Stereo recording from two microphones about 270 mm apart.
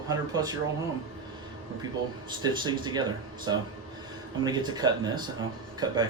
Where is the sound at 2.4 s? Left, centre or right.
Centre.